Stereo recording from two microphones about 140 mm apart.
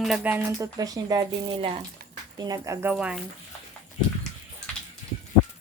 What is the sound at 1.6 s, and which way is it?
Speech, 45° right (ahead or behind).